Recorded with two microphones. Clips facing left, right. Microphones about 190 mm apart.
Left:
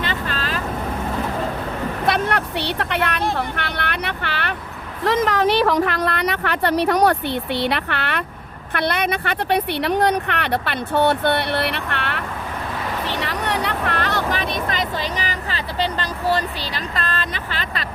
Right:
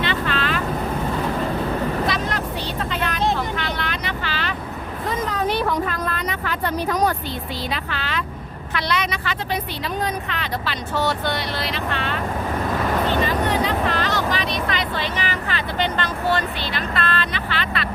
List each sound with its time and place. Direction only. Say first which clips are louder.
0.0 s boat: right 2 dB; 40° left (ahead or behind)
2.0 s vehicle: left 3 dB; 60° left (ahead or behind)
5.0 s a woman's voice: left 6 dB; 90° left; by 12.2 s 65° left (ahead or behind)
13.1 s vehicle: right 4 dB; 75° left (ahead or behind); by 17.8 s 40° left (ahead or behind)